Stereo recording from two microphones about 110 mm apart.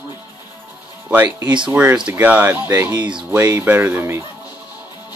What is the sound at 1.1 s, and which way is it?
Speech, 15° right (ahead or behind).